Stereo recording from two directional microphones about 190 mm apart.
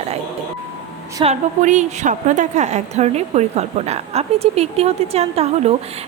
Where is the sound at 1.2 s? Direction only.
35° right (ahead or behind).